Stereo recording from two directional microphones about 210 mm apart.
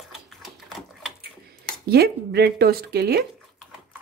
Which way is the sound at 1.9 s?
50° right (ahead or behind).